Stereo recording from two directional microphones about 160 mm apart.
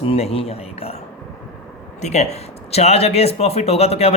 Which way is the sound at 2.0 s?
45° left (ahead or behind).